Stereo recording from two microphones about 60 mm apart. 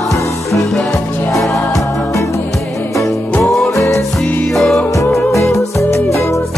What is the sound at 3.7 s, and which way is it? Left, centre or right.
Music, left.